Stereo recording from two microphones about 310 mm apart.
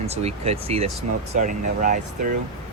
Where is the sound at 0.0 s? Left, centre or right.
Centre.